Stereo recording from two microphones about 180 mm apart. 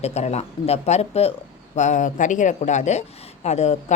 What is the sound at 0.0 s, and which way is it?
A woman's voice, 35° left (ahead or behind).